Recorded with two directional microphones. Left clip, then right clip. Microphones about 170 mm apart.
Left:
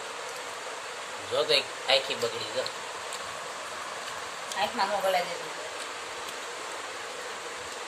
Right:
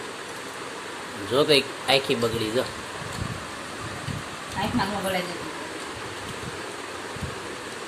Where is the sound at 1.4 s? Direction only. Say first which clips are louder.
Right 5 dB; 20° right (ahead or behind).